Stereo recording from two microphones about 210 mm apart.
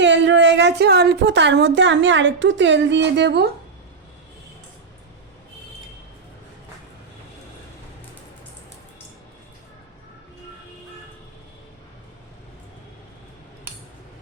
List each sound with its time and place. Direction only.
0.0 s a woman's voice: 60° right (ahead or behind)